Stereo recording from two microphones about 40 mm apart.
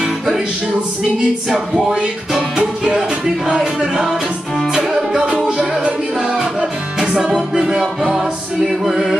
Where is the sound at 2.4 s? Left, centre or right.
Right.